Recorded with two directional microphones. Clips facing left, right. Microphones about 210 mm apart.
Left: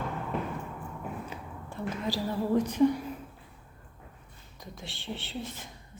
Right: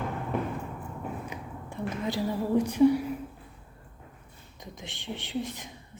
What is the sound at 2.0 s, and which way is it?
Speech, 20° right (ahead or behind).